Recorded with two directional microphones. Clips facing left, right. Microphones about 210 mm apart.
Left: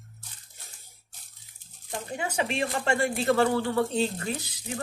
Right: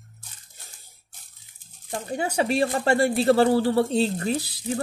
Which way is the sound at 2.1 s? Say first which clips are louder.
Right 6 dB; 35° right (ahead or behind).